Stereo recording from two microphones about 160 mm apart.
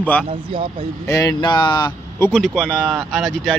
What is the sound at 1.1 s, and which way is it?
Speech, 25° left (ahead or behind).